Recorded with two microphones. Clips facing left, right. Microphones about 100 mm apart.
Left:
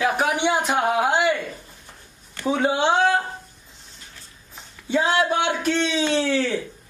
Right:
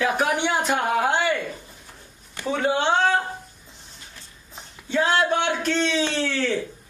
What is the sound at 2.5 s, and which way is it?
Speech, 15° left (ahead or behind).